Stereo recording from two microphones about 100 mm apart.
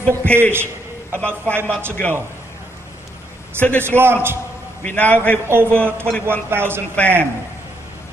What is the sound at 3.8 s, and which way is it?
Speech, 25° right (ahead or behind).